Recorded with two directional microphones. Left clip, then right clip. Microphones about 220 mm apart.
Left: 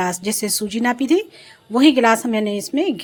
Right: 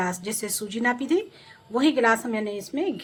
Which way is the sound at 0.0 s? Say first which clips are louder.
Left 7 dB; 35° left (ahead or behind).